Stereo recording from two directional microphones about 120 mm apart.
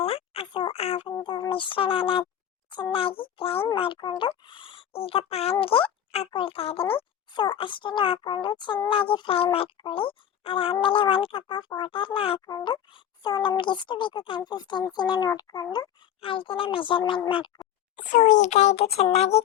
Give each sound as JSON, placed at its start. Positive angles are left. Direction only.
{"t": 0.0, "sound": "a sound", "side_deg": 55}
{"t": 1.1, "sound": "a sound", "side_deg": 35}
{"t": 2.9, "sound": "speech", "side_deg": 50}
{"t": 12.5, "sound": "speech", "side_deg": 35}
{"t": 16.2, "sound": "speech", "side_deg": 45}
{"t": 18.1, "sound": "a child's voice", "side_deg": 90}